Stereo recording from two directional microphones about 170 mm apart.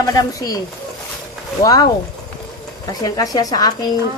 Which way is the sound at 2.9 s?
20° left (ahead or behind).